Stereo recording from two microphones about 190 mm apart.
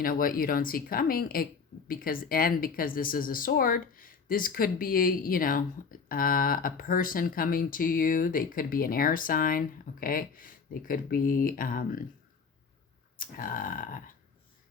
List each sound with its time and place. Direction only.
0.0 s a woman's voice: 50° left (ahead or behind)
13.1 s a woman's voice: 45° left (ahead or behind)